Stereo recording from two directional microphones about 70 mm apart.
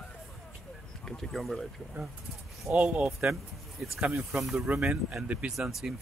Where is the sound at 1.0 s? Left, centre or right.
Centre.